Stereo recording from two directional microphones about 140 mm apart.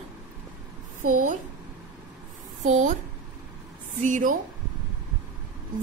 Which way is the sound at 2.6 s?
65° right (ahead or behind).